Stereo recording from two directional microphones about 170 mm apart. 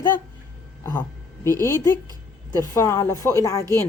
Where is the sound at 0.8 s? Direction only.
15° left (ahead or behind).